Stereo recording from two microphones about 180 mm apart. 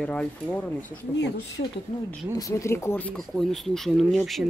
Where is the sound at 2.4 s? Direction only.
20° left (ahead or behind).